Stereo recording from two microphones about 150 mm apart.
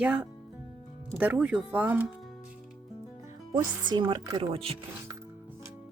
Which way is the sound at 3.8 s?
30° right (ahead or behind).